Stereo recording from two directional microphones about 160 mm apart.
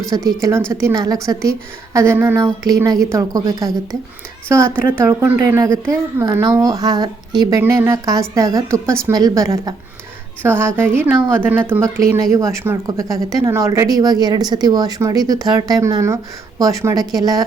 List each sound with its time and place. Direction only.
0.1 s a woman's voice: 20° right (ahead or behind)